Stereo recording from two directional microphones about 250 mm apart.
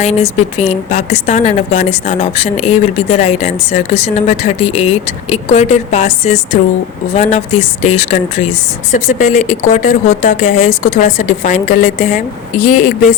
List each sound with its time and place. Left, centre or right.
0.0 s speech: left